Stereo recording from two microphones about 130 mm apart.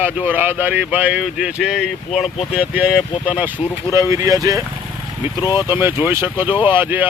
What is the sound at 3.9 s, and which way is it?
Speech, 25° right (ahead or behind).